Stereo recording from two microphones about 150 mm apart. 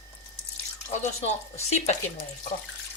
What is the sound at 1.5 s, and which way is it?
Speech, 45° left (ahead or behind).